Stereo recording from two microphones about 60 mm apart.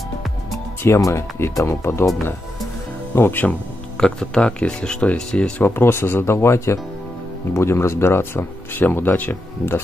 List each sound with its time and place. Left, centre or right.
0.8 s speech: left
1.8 s speech: left
3.2 s speech: left
4.0 s speech: centre
5.6 s speech: left